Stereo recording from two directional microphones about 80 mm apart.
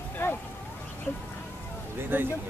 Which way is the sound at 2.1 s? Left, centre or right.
Right.